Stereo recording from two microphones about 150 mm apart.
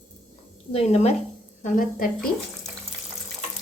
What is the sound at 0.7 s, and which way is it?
Speech, 45° left (ahead or behind).